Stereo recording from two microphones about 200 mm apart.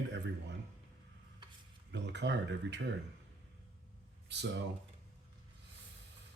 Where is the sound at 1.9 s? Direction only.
60° right (ahead or behind).